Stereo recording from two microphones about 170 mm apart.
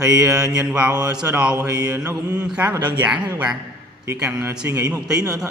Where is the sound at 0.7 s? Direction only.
5° right (ahead or behind).